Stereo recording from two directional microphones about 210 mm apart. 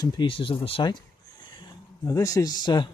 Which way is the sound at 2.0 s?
15° left (ahead or behind).